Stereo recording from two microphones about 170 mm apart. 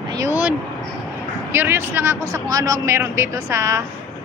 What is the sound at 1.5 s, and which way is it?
Speech, 15° right (ahead or behind).